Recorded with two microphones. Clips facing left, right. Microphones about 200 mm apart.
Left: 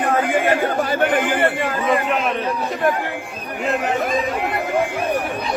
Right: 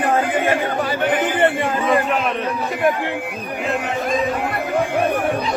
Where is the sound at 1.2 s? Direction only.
25° right (ahead or behind).